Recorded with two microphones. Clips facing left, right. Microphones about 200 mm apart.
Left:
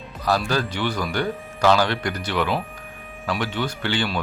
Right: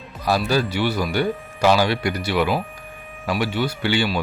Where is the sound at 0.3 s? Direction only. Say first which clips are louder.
Right 2 dB; 10° right (ahead or behind).